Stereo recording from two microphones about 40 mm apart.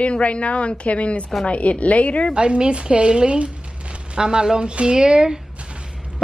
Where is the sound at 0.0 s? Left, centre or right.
Left.